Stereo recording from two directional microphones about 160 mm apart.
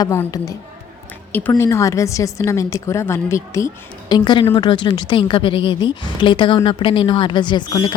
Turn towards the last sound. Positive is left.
turn(degrees=30)  # may be behind; listen again after turning